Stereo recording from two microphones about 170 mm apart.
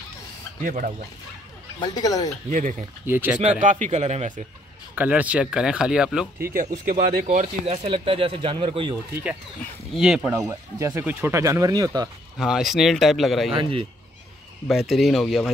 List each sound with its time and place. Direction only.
0.7 s a man's voice: 50° right (ahead or behind)
1.8 s speech: 20° left (ahead or behind)
3.1 s speech: 10° right (ahead or behind)
3.3 s a man's voice: 45° right (ahead or behind)
4.9 s speech: 10° right (ahead or behind)
6.4 s a man's voice: 55° right (ahead or behind)
7.6 s speech: 35° right (ahead or behind)
9.1 s speech: 10° right (ahead or behind)
10.5 s speech: 15° right (ahead or behind)
12.4 s speech: 5° right (ahead or behind)
13.6 s speech: 30° right (ahead or behind)
14.7 s speech: centre (ahead or behind)